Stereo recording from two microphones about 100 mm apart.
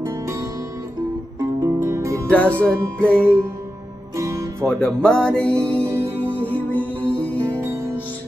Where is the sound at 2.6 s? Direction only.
10° left (ahead or behind).